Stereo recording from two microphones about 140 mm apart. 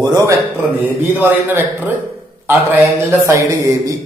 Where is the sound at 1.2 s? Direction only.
15° right (ahead or behind).